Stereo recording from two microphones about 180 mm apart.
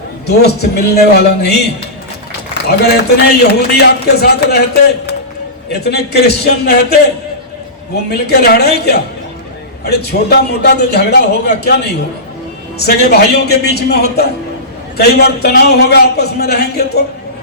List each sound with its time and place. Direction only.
0.3 s speech: 65° left (ahead or behind)
2.6 s speech: 65° left (ahead or behind)
8.3 s speech: 60° left (ahead or behind)
12.8 s speech: 65° left (ahead or behind)